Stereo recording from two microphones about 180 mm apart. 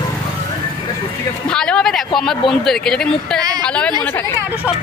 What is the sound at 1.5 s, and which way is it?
Speech, 5° left (ahead or behind).